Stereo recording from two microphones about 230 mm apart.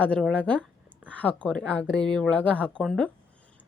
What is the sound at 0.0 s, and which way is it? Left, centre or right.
A woman's voice, centre.